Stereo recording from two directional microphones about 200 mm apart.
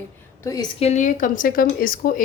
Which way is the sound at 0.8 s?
35° left (ahead or behind).